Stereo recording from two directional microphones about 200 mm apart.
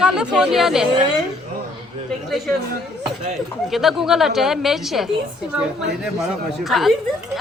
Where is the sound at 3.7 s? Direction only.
Centre (ahead or behind).